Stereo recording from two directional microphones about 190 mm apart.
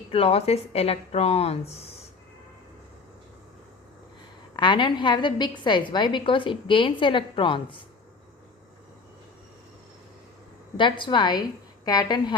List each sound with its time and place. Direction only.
0.1 s a woman's voice: 30° left (ahead or behind)
4.5 s a woman's voice: 25° left (ahead or behind)
10.8 s a woman's voice: 25° left (ahead or behind)